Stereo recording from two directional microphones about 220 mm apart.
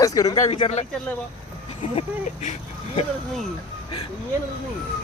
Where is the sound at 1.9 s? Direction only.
30° left (ahead or behind).